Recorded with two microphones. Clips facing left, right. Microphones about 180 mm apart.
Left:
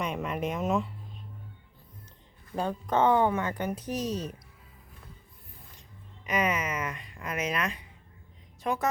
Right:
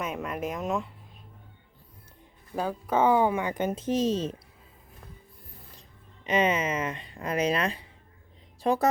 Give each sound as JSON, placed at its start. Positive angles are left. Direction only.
{"t": 0.0, "sound": "speech", "side_deg": 0}
{"t": 2.6, "sound": "speech", "side_deg": -5}
{"t": 6.2, "sound": "a woman's voice", "side_deg": -25}